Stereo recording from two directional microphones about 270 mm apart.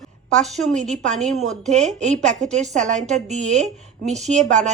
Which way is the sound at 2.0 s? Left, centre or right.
Right.